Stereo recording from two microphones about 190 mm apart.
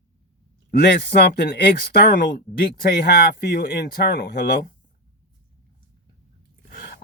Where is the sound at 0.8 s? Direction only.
60° left (ahead or behind).